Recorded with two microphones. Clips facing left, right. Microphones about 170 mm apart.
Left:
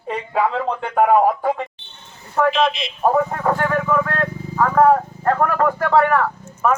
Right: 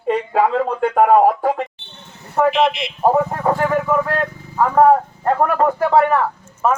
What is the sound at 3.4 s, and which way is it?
Vehicle, 10° right (ahead or behind).